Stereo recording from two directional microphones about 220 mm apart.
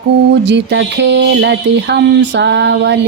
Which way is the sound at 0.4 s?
55° right (ahead or behind).